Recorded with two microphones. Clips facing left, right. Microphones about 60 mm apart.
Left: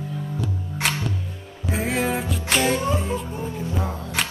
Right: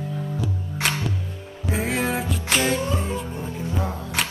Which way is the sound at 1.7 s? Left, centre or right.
Centre.